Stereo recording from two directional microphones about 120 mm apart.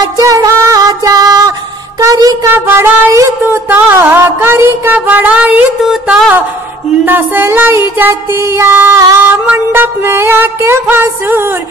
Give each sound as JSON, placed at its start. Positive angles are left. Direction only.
{"t": 0.2, "sound": "music", "side_deg": -30}
{"t": 2.0, "sound": "speech", "side_deg": -30}
{"t": 2.5, "sound": "music", "side_deg": -20}
{"t": 7.1, "sound": "music", "side_deg": -15}